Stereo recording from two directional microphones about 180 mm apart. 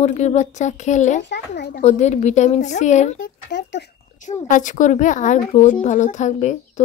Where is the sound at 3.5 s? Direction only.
80° left.